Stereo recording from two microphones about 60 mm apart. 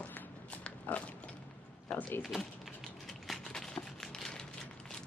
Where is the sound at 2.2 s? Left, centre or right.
Centre.